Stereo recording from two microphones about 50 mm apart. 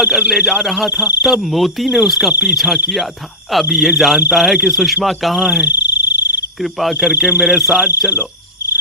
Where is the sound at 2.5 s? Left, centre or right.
Centre.